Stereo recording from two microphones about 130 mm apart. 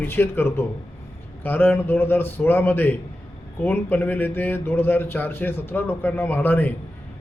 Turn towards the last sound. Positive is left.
turn(degrees=15)  # may be behind; listen again after turning